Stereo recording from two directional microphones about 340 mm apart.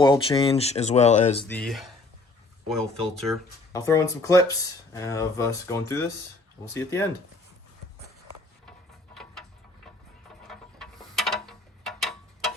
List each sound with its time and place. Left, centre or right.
0.0 s speech: centre
1.5 s speech: centre
10.4 s mechanisms: centre